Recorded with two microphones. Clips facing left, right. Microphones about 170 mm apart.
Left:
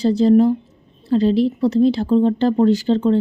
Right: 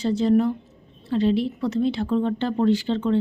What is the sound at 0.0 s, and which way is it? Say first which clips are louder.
Speech: left 6 dB; 35° left (ahead or behind).